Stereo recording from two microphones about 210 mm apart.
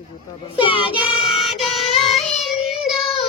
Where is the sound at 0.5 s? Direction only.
25° left (ahead or behind).